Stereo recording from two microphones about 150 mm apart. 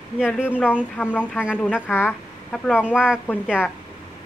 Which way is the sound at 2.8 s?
5° right (ahead or behind).